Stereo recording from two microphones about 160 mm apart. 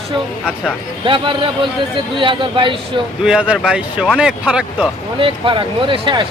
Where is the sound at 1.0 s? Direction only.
30° right (ahead or behind).